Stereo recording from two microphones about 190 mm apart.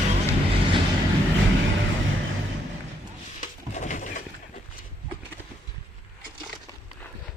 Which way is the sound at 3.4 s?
40° left (ahead or behind).